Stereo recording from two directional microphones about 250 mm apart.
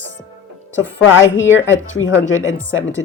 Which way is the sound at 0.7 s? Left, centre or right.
Left.